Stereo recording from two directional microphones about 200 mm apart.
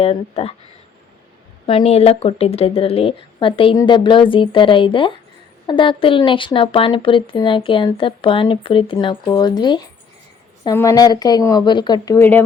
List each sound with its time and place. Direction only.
0.0 s speech: 30° left (ahead or behind)
1.6 s speech: 30° left (ahead or behind); by 12.5 s 10° left (ahead or behind)